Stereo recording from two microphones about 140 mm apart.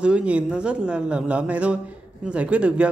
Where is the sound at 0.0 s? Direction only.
10° right (ahead or behind).